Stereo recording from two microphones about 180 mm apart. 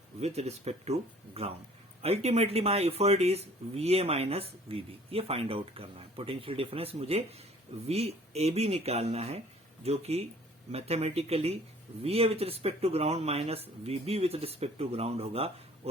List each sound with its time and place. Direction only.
0.2 s speech: 35° right (ahead or behind)